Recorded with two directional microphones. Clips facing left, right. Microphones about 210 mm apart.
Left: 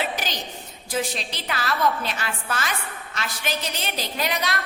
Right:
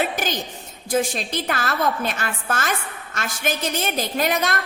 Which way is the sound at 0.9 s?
50° right (ahead or behind).